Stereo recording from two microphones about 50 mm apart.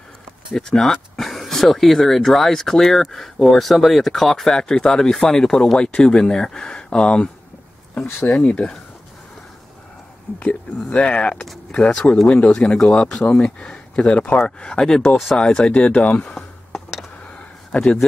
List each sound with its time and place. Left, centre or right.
0.6 s speech: centre
8.4 s speech: left
10.4 s speech: left
11.7 s speech: centre
14.6 s speech: centre
15.0 s speech: centre
15.3 s speech: centre
17.7 s speech: left